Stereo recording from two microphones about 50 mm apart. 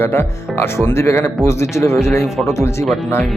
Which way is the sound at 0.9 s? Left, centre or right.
Left.